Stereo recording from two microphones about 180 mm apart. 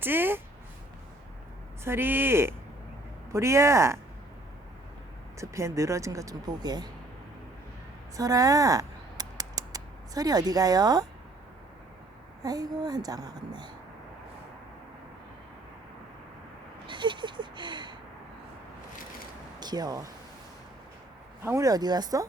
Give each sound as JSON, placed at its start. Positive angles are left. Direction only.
{"t": 0.0, "sound": "speech", "side_deg": -10}
{"t": 1.8, "sound": "speech", "side_deg": -15}
{"t": 5.4, "sound": "speech", "side_deg": -15}
{"t": 8.1, "sound": "scissors", "side_deg": -20}
{"t": 12.4, "sound": "a woman's voice", "side_deg": -20}
{"t": 16.8, "sound": "speech", "side_deg": -25}
{"t": 19.5, "sound": "speech", "side_deg": -20}
{"t": 21.4, "sound": "a woman's voice", "side_deg": -15}